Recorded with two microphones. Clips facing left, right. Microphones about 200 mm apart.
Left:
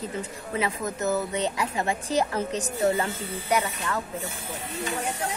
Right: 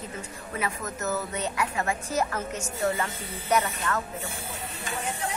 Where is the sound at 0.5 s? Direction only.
30° left (ahead or behind).